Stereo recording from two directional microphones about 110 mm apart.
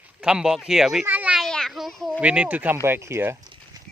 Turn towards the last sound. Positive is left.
turn(degrees=-25)  # may be behind; listen again after turning